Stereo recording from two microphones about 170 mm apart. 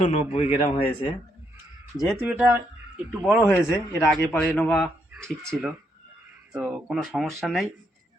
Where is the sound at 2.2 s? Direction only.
10° right (ahead or behind).